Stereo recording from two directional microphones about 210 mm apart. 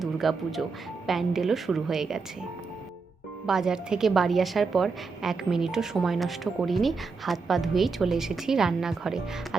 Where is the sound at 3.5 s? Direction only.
5° right (ahead or behind).